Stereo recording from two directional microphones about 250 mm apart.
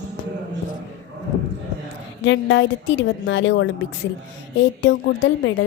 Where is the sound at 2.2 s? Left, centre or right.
Left.